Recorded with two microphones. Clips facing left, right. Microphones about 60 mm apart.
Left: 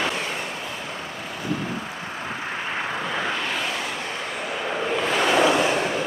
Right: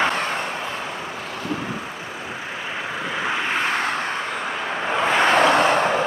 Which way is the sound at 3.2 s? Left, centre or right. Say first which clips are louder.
Right 6 dB; centre.